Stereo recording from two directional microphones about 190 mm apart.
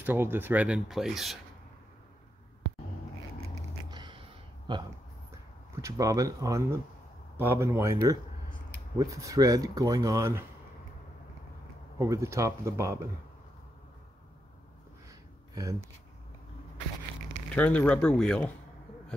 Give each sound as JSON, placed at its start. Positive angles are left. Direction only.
{"t": 0.0, "sound": "speech", "side_deg": -10}
{"t": 3.9, "sound": "a sound", "side_deg": -25}
{"t": 4.7, "sound": "speech", "side_deg": -25}
{"t": 12.0, "sound": "speech", "side_deg": -15}
{"t": 15.5, "sound": "speech", "side_deg": -20}
{"t": 17.6, "sound": "speech", "side_deg": 5}